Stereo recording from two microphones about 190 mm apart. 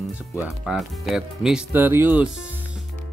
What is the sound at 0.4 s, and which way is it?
Speech, centre (ahead or behind).